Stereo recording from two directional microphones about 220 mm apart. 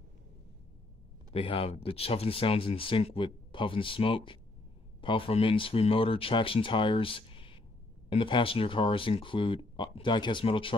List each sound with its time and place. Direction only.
1.3 s speech: 25° left (ahead or behind)